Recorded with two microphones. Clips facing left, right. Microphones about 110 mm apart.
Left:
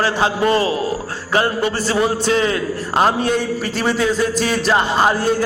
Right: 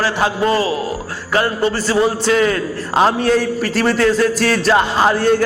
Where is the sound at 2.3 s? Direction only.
30° left (ahead or behind).